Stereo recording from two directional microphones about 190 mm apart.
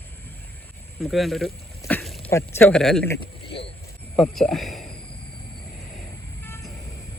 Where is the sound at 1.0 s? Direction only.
Centre (ahead or behind).